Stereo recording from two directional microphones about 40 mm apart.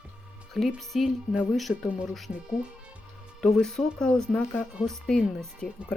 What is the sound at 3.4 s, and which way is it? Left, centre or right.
Speech, centre.